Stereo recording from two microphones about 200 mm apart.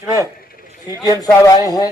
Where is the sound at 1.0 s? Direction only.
20° left (ahead or behind).